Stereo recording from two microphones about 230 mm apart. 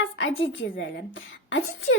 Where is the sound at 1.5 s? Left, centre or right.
Left.